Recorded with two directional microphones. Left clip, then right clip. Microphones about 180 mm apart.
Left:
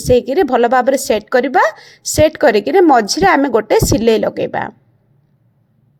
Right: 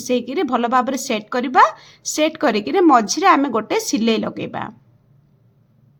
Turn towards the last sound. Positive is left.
turn(degrees=30)  # may be behind; listen again after turning